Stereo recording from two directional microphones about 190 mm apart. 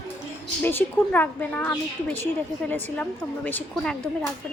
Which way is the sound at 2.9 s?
10° left (ahead or behind).